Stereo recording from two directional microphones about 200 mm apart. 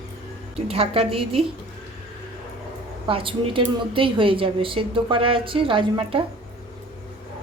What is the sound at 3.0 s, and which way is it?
A woman's voice, 25° right (ahead or behind).